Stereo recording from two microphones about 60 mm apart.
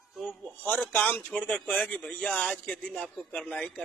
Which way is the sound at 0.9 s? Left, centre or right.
Left.